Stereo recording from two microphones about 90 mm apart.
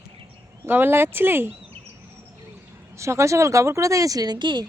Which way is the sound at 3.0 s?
35° right (ahead or behind).